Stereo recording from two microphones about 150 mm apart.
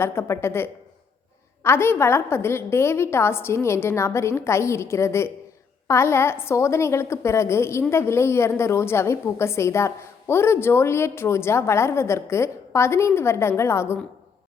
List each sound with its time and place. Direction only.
0.0 s a woman's voice: 15° left (ahead or behind)